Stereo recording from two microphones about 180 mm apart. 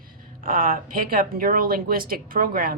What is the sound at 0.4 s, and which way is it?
Speech, 50° right (ahead or behind).